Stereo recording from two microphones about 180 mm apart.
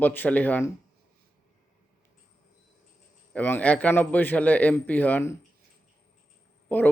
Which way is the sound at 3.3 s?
10° left (ahead or behind).